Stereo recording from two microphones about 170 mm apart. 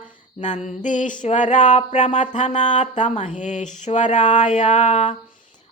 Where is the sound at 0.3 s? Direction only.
45° left (ahead or behind).